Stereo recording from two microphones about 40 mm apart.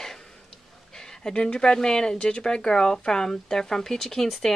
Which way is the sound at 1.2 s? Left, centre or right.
Left.